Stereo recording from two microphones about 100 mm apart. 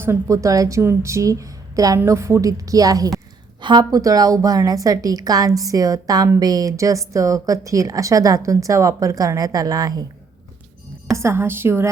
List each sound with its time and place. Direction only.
0.0 s a woman's voice: 30° right (ahead or behind)
3.6 s a woman's voice: 50° right (ahead or behind)
11.1 s a woman's voice: 30° right (ahead or behind)